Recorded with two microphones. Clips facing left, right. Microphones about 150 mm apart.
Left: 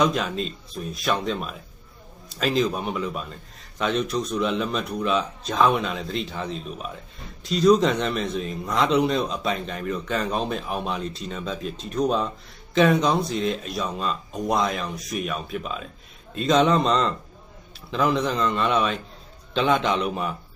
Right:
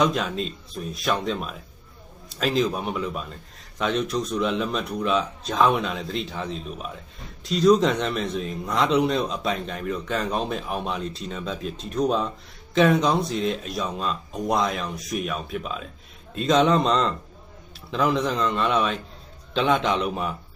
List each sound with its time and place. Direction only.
0.0 s a man's voice: centre (ahead or behind)